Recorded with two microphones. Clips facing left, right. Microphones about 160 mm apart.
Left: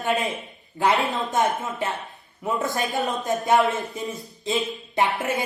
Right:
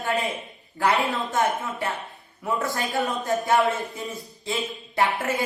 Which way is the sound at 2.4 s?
20° left (ahead or behind).